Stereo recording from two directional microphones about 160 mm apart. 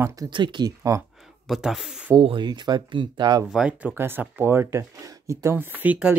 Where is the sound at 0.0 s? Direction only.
20° right (ahead or behind).